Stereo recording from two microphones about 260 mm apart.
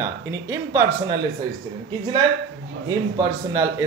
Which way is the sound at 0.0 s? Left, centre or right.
Centre.